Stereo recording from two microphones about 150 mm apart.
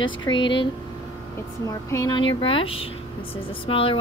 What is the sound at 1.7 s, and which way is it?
Speech, 25° left (ahead or behind).